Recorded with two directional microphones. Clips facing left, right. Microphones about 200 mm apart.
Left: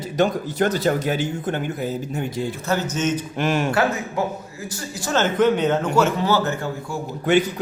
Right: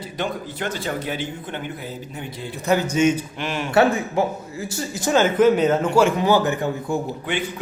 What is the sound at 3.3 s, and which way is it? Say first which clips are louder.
Speech: left 6 dB; 45° left (ahead or behind).